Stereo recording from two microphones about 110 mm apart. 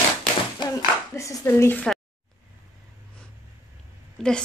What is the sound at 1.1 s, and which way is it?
Speech, 25° left (ahead or behind).